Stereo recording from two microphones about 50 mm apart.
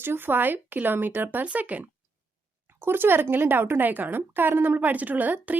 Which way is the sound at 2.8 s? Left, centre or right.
Right.